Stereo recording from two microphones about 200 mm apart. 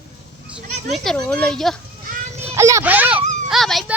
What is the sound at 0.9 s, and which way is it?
Speech, centre (ahead or behind).